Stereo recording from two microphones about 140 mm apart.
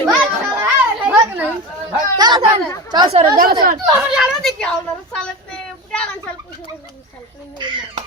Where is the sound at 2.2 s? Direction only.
30° right (ahead or behind).